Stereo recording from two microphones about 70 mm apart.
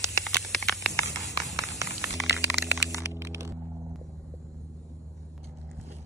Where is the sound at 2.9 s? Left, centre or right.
Right.